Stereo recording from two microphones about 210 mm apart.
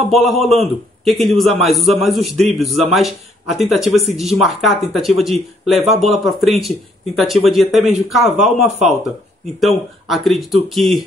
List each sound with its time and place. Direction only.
0.1 s a man's voice: centre (ahead or behind)
8.6 s speech: 35° right (ahead or behind)
9.6 s a man's voice: centre (ahead or behind)